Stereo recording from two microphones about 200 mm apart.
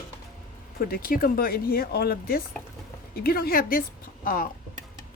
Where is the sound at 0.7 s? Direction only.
45° left (ahead or behind).